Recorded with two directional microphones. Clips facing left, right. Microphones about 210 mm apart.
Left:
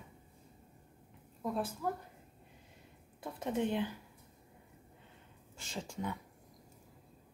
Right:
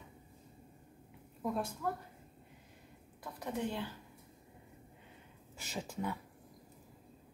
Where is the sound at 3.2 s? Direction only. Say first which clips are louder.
Left 4 dB; 25° left (ahead or behind).